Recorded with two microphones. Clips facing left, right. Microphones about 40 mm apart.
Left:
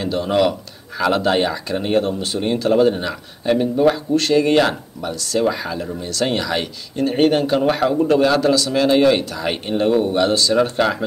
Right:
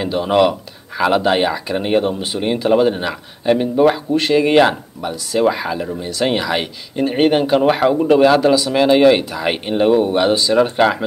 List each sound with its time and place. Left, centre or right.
0.0 s speech: centre